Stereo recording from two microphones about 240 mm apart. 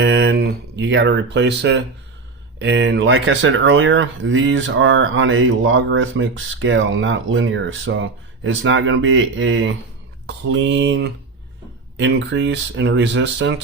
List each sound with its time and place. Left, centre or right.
0.0 s speech: right